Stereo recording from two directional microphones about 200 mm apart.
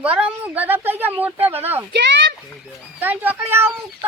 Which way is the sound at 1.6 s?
10° right (ahead or behind).